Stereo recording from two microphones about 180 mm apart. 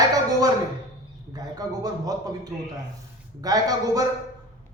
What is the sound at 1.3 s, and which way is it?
A man's voice, 20° right (ahead or behind).